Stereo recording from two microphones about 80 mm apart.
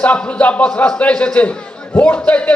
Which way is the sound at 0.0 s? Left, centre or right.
Centre.